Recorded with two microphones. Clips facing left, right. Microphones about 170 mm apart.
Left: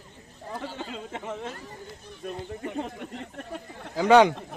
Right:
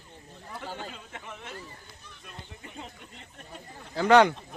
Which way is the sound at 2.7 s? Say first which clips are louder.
Left 12 dB; 60° left (ahead or behind).